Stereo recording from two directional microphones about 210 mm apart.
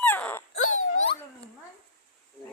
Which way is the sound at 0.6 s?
75° left (ahead or behind).